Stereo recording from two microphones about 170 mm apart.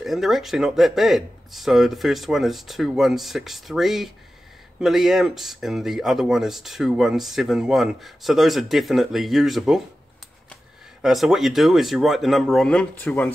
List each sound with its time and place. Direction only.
0.0 s speech: centre (ahead or behind)